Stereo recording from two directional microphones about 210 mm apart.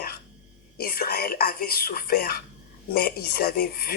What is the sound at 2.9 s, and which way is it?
Speech, 45° left (ahead or behind).